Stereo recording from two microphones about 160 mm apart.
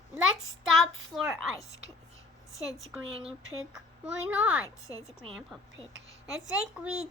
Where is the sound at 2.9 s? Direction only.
10° right (ahead or behind).